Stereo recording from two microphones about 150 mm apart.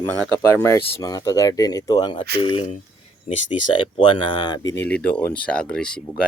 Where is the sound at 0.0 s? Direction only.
15° left (ahead or behind); by 2.6 s 35° left (ahead or behind).